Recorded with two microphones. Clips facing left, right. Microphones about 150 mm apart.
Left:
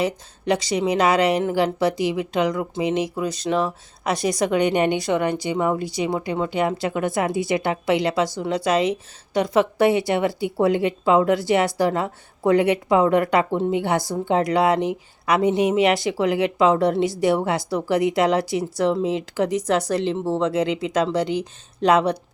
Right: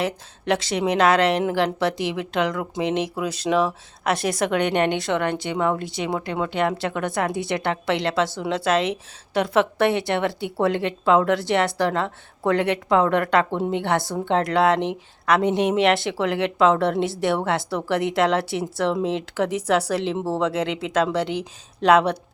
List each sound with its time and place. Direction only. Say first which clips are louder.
0.0 s speech: left 2 dB; centre (ahead or behind)